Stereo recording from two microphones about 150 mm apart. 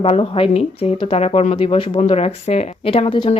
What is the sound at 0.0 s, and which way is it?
Speech, 40° left (ahead or behind).